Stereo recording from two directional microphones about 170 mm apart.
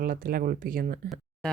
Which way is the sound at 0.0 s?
60° right (ahead or behind).